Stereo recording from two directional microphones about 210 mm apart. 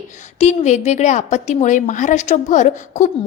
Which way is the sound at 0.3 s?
35° left (ahead or behind).